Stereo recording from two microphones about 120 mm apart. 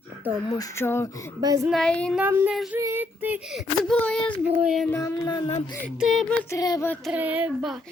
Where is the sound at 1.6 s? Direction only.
5° left (ahead or behind).